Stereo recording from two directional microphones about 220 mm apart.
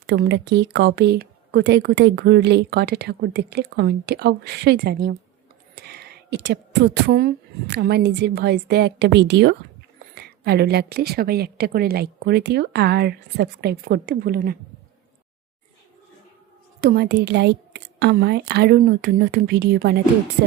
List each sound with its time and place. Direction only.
0.1 s speech: 50° right (ahead or behind)
16.8 s speech: 45° right (ahead or behind)